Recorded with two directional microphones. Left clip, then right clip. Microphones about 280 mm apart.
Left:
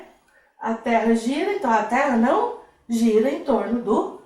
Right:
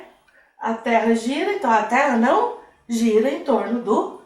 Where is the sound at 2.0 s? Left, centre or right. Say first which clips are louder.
Right 2 dB; centre.